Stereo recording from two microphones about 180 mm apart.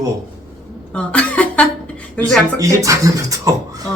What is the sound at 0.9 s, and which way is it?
Speech, 5° left (ahead or behind).